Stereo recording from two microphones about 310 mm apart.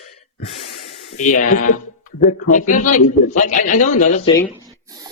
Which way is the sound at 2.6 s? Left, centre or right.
Left.